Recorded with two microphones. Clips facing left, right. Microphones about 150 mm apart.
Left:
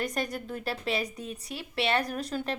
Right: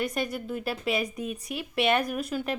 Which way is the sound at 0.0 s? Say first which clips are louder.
Right 2 dB; 40° left (ahead or behind).